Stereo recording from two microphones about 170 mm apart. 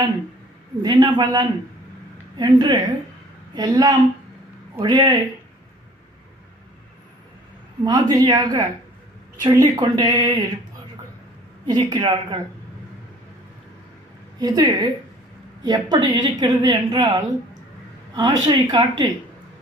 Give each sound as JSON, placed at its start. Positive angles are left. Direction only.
{"t": 0.8, "sound": "a woman's voice", "side_deg": -25}
{"t": 7.9, "sound": "a woman's voice", "side_deg": -25}
{"t": 11.6, "sound": "a woman's voice", "side_deg": -25}
{"t": 14.3, "sound": "a woman's voice", "side_deg": -25}